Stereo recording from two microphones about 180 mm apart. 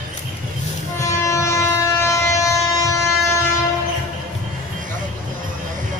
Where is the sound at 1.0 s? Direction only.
15° left (ahead or behind).